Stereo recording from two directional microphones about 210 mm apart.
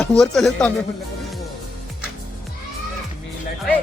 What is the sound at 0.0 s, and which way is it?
Speech, centre (ahead or behind).